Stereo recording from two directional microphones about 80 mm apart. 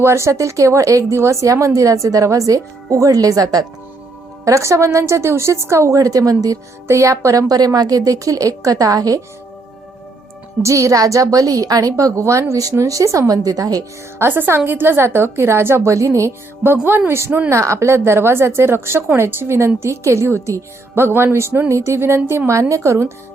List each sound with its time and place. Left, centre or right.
0.0 s speech: right
4.4 s a woman's voice: right
10.6 s speech: right
14.2 s a woman's voice: right